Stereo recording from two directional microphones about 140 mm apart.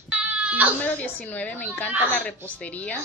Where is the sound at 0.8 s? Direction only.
10° left (ahead or behind).